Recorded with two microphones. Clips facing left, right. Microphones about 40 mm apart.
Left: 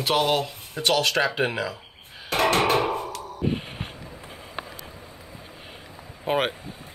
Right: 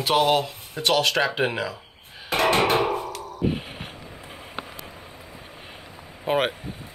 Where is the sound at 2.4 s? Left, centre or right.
Centre.